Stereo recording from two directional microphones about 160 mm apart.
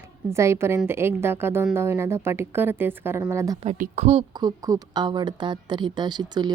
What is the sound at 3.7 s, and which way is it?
Speech, 45° right (ahead or behind).